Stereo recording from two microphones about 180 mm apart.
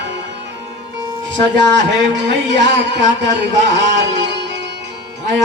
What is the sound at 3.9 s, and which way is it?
Music, 80° right.